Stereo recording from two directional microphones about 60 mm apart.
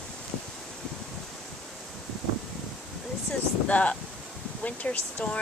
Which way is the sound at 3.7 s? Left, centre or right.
Left.